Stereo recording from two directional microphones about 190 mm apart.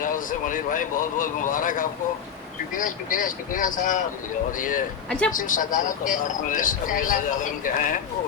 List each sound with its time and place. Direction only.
0.0 s speech: 45° left (ahead or behind)
5.0 s speech: 5° left (ahead or behind)
5.3 s speech: 45° left (ahead or behind)